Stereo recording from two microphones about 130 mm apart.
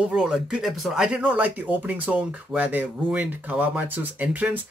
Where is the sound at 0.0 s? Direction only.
5° right (ahead or behind).